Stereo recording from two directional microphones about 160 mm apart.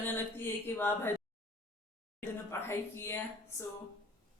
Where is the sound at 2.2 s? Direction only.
15° left (ahead or behind).